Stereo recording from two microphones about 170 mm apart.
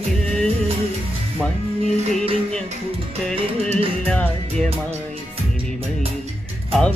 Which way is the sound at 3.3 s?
35° right (ahead or behind).